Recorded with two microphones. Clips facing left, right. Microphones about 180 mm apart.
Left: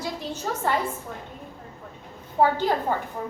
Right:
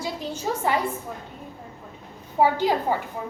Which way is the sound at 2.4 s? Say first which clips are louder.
Right 1 dB; 10° right (ahead or behind).